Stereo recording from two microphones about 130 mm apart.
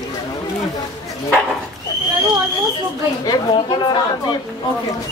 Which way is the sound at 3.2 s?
35° left (ahead or behind).